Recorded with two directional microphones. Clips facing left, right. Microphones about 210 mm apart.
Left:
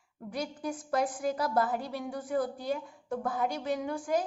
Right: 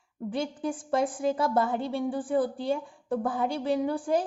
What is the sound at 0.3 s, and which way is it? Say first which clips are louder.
A woman's voice: right 5 dB; 25° right (ahead or behind).